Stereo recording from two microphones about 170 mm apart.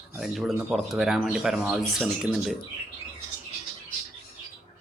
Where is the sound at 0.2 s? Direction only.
Centre (ahead or behind).